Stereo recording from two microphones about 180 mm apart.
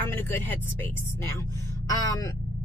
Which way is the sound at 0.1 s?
10° left (ahead or behind).